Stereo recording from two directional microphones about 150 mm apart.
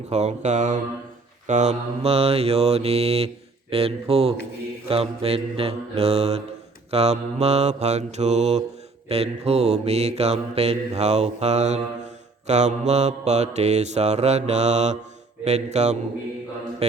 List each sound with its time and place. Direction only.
0.1 s mantra: 50° right (ahead or behind)
3.7 s speech: 40° right (ahead or behind)
4.1 s mantra: 40° right (ahead or behind)